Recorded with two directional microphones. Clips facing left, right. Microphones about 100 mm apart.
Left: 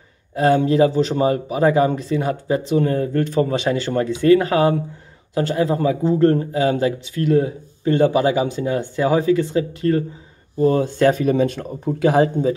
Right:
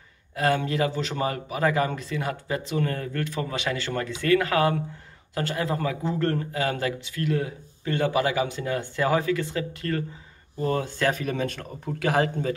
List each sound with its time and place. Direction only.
0.4 s speech: 25° left (ahead or behind)